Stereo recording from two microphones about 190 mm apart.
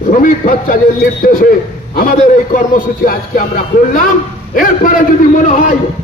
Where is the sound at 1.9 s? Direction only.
45° left (ahead or behind).